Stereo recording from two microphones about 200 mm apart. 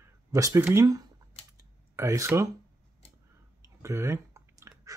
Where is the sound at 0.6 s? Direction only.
15° right (ahead or behind).